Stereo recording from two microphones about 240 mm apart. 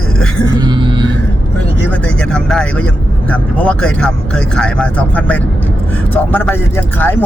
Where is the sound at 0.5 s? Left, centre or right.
Centre.